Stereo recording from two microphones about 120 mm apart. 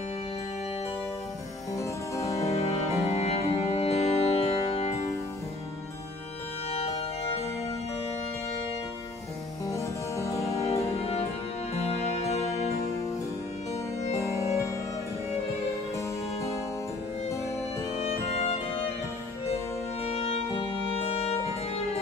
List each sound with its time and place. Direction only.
1.7 s music: 25° left (ahead or behind)
2.5 s music: 60° left (ahead or behind)
6.7 s music: 55° left (ahead or behind)
9.7 s music: 25° left (ahead or behind)
10.5 s music: 60° left (ahead or behind)
14.1 s music: 25° left (ahead or behind)
16.3 s music: 25° left (ahead or behind)
17.9 s music: 60° left (ahead or behind)
20.0 s music: 60° left (ahead or behind)